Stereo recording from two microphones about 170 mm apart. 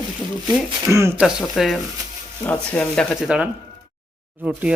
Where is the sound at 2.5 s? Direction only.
10° left (ahead or behind).